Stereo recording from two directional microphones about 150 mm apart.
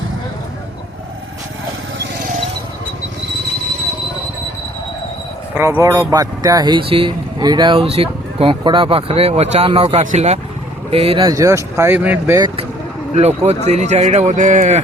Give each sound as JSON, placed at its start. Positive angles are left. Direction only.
{"t": 5.5, "sound": "speech", "side_deg": -20}
{"t": 11.3, "sound": "speech", "side_deg": -20}
{"t": 13.1, "sound": "speech", "side_deg": -45}